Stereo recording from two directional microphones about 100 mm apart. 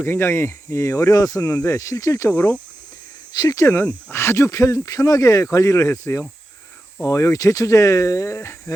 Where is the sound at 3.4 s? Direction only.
40° left (ahead or behind).